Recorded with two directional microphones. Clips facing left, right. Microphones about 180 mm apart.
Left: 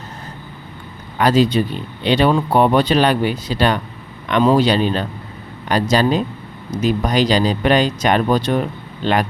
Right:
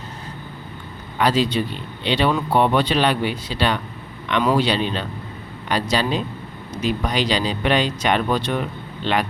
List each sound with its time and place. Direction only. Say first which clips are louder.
1.2 s speech: left 5 dB; 45° left (ahead or behind)